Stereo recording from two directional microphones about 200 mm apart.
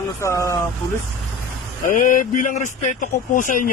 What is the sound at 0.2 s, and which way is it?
Speech, 15° left (ahead or behind).